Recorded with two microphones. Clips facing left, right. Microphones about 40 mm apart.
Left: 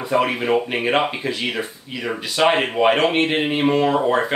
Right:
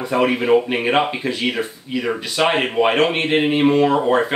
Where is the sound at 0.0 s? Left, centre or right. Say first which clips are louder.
Right 2 dB; centre.